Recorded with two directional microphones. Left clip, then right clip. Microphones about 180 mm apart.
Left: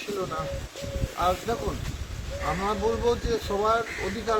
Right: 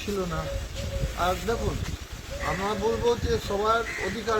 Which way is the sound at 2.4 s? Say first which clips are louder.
Even; 15° left (ahead or behind).